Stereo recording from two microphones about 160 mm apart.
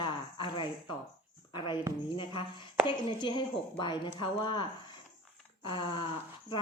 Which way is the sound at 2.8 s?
30° left (ahead or behind).